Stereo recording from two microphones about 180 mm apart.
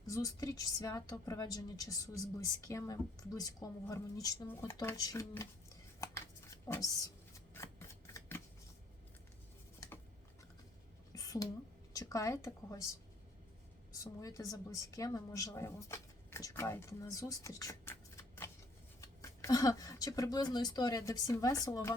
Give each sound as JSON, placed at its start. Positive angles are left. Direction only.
{"t": 0.0, "sound": "a woman's voice", "side_deg": 20}
{"t": 6.7, "sound": "a woman's voice", "side_deg": 20}
{"t": 7.3, "sound": "shuffling cards", "side_deg": 15}
{"t": 11.1, "sound": "a sound", "side_deg": 20}
{"t": 11.9, "sound": "speech", "side_deg": 15}
{"t": 14.0, "sound": "a woman's voice", "side_deg": 20}